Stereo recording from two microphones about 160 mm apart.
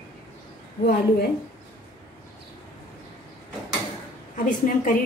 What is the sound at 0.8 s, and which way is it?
Speech, 75° left (ahead or behind).